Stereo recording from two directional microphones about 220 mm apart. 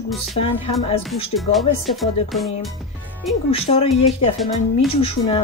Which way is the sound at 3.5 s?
25° left (ahead or behind).